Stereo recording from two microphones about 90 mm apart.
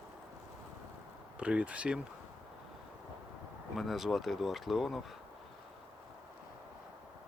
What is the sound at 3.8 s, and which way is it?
Speech, centre (ahead or behind).